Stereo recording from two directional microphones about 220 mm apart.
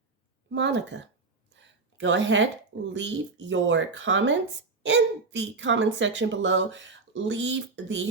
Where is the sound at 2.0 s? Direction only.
55° right (ahead or behind).